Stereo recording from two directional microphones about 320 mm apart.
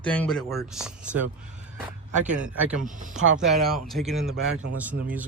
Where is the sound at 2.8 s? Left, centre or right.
Right.